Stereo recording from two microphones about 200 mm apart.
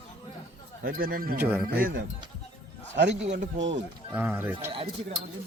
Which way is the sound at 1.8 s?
45° right (ahead or behind).